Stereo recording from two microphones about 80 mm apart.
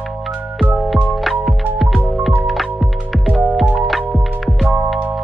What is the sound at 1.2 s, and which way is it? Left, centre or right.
Music, centre.